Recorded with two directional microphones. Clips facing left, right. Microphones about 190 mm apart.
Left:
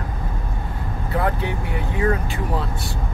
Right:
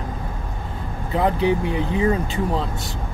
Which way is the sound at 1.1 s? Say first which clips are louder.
Right 5 dB; 20° right (ahead or behind).